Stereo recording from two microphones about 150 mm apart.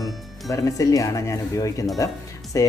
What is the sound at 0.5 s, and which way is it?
Speech, 20° left (ahead or behind).